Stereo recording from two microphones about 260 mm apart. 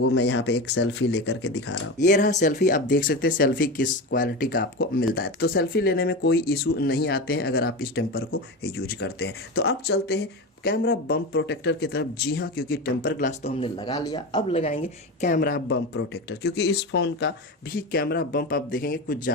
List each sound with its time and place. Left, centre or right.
0.0 s speech: left
2.0 s speech: left